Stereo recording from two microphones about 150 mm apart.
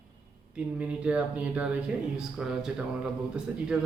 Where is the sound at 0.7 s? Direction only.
10° right (ahead or behind).